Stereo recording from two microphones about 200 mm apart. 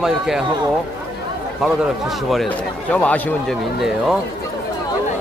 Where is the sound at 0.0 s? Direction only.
Centre (ahead or behind).